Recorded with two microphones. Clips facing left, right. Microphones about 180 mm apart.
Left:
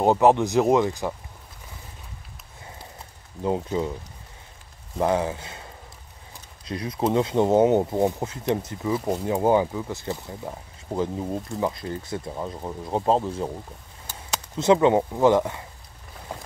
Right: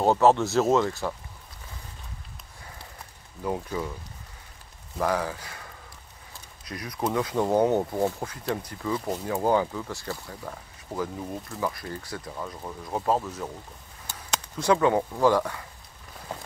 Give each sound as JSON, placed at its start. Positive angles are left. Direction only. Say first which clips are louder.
{"t": 0.0, "sound": "speech", "louder": "left 2 dB", "side_deg": 15}
{"t": 3.4, "sound": "speech", "louder": "left 5 dB", "side_deg": 25}
{"t": 4.9, "sound": "speech", "louder": "left 4 dB", "side_deg": 25}
{"t": 14.6, "sound": "speech", "louder": "left 4 dB", "side_deg": 20}